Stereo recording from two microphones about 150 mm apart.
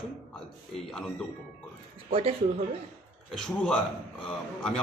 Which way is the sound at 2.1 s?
40° right (ahead or behind).